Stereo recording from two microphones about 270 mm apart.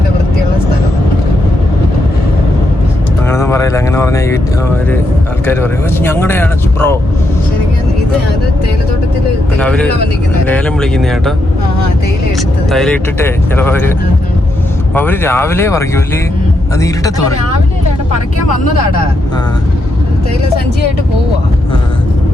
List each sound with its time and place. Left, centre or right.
3.2 s vehicle: centre
5.5 s speech: centre
9.6 s speech: centre
12.4 s speech: centre
14.9 s speech: centre